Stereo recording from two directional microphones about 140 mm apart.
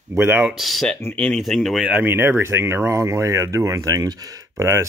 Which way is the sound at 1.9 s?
15° right (ahead or behind).